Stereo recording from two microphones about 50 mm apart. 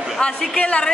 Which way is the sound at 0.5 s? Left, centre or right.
Left.